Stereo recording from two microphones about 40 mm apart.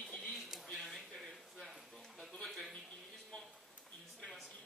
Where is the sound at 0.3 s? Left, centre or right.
Centre.